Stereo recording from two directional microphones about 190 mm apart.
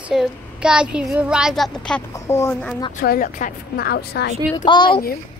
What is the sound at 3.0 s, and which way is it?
A woman's voice, 45° left (ahead or behind).